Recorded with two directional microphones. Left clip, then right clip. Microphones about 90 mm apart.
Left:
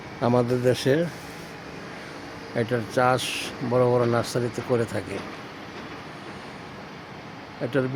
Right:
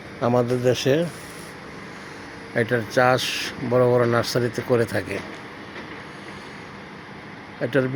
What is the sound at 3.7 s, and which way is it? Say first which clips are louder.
Speech: right 3 dB; 20° right (ahead or behind).